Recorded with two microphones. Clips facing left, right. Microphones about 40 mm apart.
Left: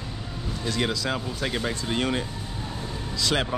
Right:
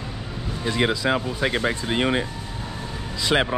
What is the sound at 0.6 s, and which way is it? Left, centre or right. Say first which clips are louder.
Speech: right 5 dB; right.